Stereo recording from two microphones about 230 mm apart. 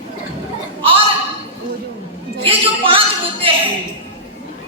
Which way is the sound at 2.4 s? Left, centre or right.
Right.